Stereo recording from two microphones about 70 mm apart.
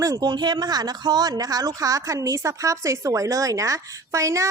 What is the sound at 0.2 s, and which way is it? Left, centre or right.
A woman's voice, right.